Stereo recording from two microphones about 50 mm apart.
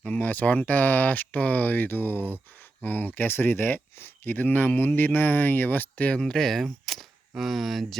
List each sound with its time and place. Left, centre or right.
0.0 s speech: left
6.1 s speech: centre